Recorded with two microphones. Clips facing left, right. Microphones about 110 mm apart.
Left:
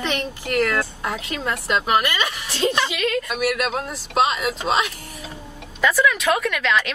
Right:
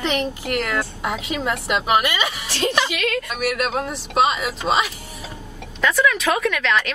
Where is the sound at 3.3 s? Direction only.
45° right (ahead or behind).